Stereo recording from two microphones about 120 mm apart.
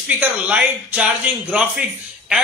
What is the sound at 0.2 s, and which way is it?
Speech, 10° right (ahead or behind).